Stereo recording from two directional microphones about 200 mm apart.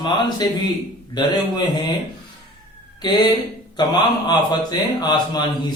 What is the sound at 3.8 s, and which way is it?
A man's voice, 20° left (ahead or behind).